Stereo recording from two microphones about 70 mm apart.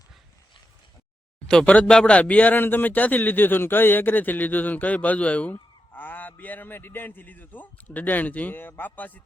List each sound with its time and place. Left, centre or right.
1.5 s speech: centre